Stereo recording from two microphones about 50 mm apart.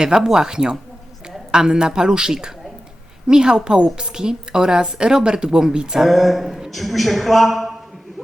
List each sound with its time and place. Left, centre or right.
0.0 s a woman's voice: centre
6.1 s a man's voice: centre